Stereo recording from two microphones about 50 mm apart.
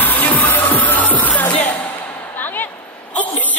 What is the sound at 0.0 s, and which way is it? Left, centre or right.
Music, left.